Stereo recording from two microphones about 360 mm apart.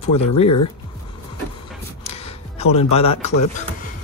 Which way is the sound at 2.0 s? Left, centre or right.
Centre.